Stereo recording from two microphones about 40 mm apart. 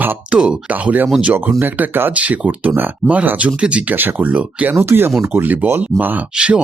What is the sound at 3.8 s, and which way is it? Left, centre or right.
Speech, right.